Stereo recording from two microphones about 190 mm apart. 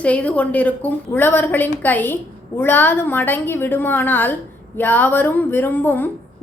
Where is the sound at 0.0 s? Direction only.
5° left (ahead or behind).